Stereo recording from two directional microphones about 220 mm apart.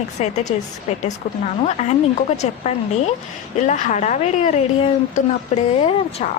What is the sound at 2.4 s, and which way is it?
A woman's voice, 30° left (ahead or behind).